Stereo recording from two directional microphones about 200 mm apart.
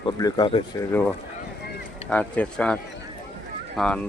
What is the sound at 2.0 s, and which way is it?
Speech, 5° left (ahead or behind).